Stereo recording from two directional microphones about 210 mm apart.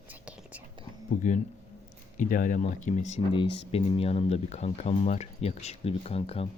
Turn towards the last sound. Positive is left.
turn(degrees=30)  # may be behind; listen again after turning